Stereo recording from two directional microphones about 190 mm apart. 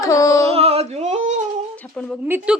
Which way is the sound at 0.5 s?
30° right (ahead or behind).